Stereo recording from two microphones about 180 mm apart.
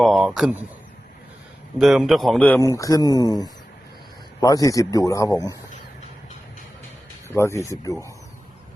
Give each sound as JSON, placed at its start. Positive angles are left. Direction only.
{"t": 0.0, "sound": "a man's voice", "side_deg": 0}
{"t": 1.8, "sound": "speech", "side_deg": 0}
{"t": 2.7, "sound": "a man's voice", "side_deg": 20}
{"t": 7.3, "sound": "speech", "side_deg": 15}